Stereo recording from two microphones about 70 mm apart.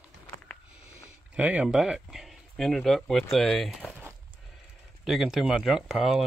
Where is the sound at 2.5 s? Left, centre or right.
Centre.